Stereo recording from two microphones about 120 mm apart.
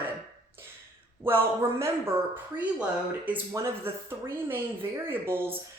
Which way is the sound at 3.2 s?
15° right (ahead or behind).